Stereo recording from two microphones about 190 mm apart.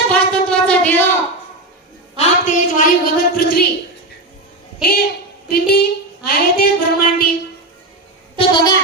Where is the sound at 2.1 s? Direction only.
40° left (ahead or behind).